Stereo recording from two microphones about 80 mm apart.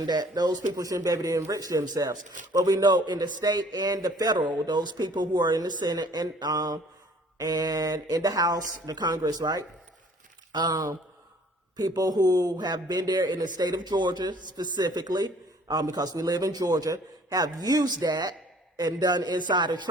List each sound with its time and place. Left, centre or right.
0.0 s a man's voice: right
11.8 s a man's voice: right